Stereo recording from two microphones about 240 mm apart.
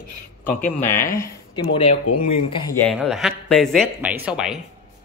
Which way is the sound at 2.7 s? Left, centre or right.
Centre.